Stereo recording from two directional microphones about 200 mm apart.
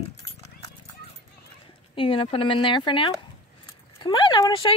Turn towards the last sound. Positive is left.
turn(degrees=25)  # may be behind; listen again after turning